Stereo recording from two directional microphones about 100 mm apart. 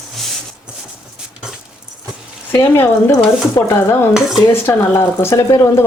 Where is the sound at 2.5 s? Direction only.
25° left (ahead or behind).